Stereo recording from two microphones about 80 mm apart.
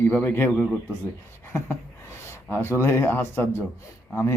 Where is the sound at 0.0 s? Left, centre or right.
Left.